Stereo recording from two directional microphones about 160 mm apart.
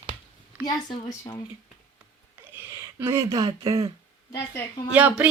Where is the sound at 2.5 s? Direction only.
15° right (ahead or behind).